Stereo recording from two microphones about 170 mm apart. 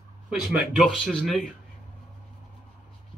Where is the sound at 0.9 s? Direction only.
5° left (ahead or behind).